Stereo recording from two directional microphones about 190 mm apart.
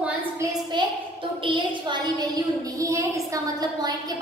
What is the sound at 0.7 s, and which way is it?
A child's voice, 25° right (ahead or behind).